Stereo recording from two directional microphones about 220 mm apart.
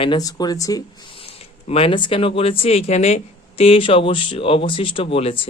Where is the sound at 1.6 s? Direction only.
25° left (ahead or behind).